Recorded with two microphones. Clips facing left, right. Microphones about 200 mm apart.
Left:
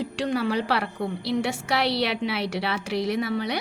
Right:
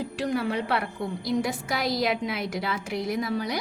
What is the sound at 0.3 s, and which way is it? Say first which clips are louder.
A woman's voice: left 2 dB; 85° left.